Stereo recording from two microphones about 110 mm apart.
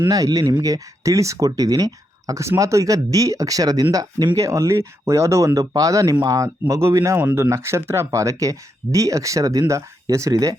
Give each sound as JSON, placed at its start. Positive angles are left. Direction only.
{"t": 0.1, "sound": "speech", "side_deg": -35}
{"t": 7.2, "sound": "speech", "side_deg": -15}